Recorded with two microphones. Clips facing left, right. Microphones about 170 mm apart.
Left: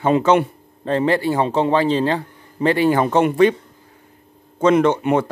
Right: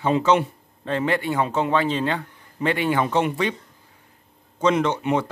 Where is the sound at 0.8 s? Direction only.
35° left (ahead or behind).